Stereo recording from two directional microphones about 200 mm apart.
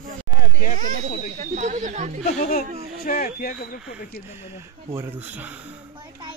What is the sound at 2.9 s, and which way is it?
Speech, 45° left (ahead or behind).